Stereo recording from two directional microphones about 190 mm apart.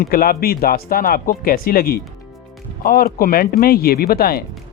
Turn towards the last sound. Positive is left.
turn(degrees=55)  # may be behind; listen again after turning